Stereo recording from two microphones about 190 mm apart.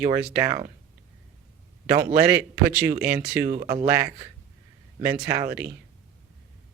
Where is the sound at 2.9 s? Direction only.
55° right (ahead or behind).